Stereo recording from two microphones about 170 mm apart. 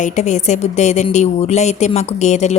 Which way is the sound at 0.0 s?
45° left (ahead or behind).